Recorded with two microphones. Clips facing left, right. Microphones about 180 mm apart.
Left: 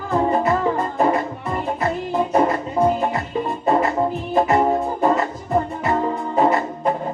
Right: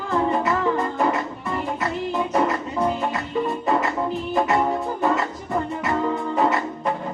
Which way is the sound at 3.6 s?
30° left (ahead or behind).